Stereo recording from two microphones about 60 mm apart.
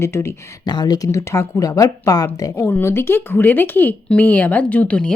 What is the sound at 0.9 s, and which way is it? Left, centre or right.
Speech, left.